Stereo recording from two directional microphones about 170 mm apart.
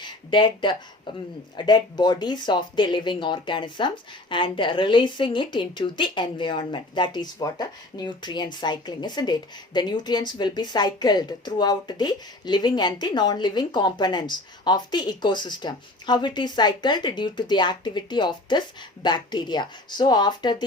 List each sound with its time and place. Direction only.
0.0 s a woman's voice: 25° left (ahead or behind)